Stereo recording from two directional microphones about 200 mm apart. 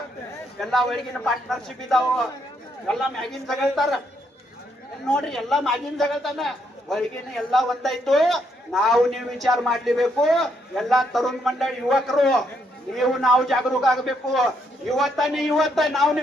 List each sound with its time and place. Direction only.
0.6 s a man's voice: centre (ahead or behind)
5.0 s a man's voice: 5° left (ahead or behind)